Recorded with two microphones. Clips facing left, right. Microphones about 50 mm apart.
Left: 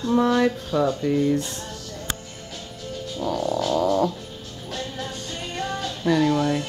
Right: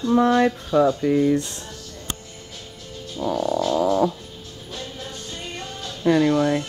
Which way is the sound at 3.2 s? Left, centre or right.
Centre.